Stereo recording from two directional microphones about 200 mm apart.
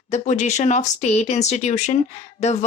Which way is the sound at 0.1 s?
35° left (ahead or behind).